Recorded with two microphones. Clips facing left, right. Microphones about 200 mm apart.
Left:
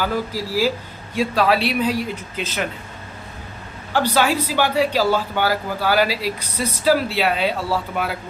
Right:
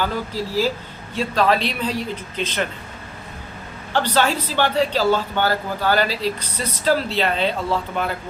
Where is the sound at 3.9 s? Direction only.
10° left (ahead or behind).